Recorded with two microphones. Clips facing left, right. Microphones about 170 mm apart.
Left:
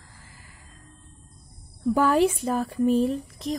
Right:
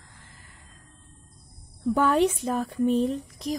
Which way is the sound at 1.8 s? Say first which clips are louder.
Left 1 dB; 10° left (ahead or behind).